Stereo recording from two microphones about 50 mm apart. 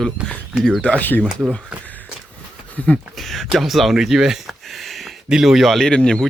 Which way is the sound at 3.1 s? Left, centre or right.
Centre.